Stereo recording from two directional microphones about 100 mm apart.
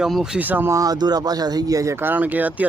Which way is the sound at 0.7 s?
35° right (ahead or behind).